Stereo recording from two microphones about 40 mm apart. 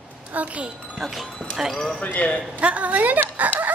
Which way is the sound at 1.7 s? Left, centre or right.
Centre.